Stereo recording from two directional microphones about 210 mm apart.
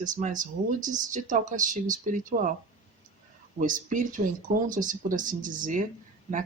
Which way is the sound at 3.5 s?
40° right (ahead or behind).